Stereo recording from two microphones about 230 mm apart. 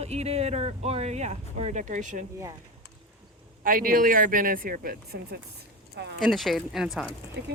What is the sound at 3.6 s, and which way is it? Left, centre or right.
Speech, right.